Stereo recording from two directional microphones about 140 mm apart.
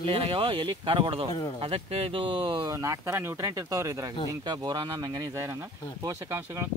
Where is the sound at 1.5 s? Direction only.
40° right (ahead or behind).